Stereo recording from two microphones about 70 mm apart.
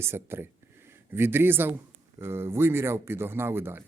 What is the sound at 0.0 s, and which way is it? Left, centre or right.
Speech, right.